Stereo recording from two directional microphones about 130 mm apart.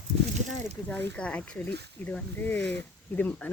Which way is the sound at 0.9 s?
10° left (ahead or behind).